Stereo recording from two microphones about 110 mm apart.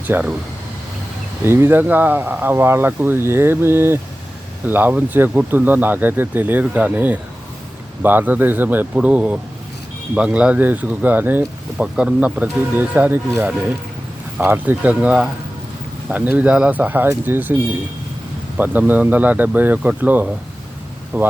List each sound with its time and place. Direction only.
0.1 s speech: 15° right (ahead or behind)
1.5 s speech: 20° right (ahead or behind)
14.3 s speech: 15° right (ahead or behind)
18.5 s speech: 15° right (ahead or behind)